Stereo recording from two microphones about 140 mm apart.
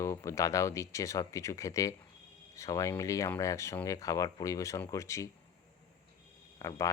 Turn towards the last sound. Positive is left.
turn(degrees=25)  # may be behind; listen again after turning